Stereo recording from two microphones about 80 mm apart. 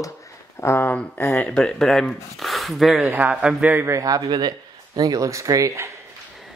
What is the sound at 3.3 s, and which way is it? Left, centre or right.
Speech, centre.